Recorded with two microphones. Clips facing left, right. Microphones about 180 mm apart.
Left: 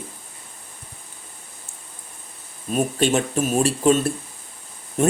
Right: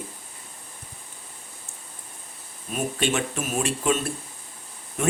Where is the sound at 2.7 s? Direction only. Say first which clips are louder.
Left 6 dB; 40° left (ahead or behind).